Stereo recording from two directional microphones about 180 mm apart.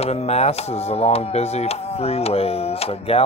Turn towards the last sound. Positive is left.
turn(degrees=35)  # may be behind; listen again after turning